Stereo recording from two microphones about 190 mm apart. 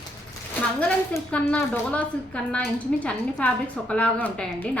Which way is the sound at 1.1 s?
5° left (ahead or behind).